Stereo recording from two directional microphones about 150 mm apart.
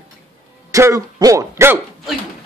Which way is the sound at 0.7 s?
20° right (ahead or behind).